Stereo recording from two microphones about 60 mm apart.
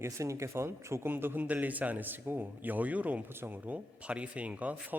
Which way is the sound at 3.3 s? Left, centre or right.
Right.